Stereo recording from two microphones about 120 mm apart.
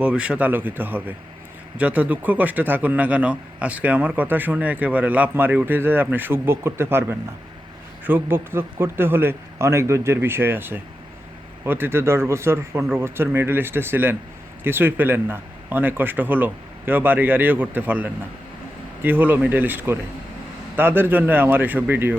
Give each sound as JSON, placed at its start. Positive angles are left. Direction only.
{"t": 0.0, "sound": "a man's voice", "side_deg": -10}